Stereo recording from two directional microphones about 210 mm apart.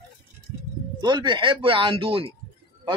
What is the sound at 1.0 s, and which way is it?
Speech, 20° right (ahead or behind).